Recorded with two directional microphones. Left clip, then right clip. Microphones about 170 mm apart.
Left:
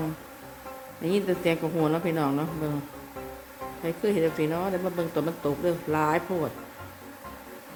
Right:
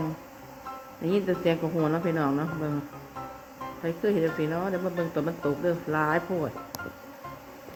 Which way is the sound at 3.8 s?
15° left (ahead or behind).